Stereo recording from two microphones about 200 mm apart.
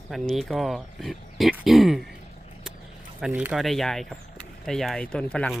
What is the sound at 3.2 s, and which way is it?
Speech, 5° right (ahead or behind).